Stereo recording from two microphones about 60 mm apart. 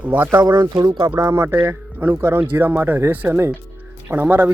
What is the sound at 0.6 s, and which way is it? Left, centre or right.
Speech, right.